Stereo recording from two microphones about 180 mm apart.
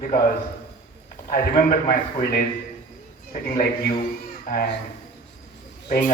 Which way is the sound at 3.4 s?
55° left (ahead or behind).